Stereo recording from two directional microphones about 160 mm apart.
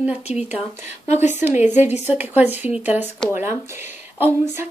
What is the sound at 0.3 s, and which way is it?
Speech, 45° left (ahead or behind).